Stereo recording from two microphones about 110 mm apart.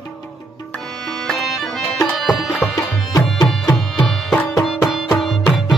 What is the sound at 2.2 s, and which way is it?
Music, centre (ahead or behind).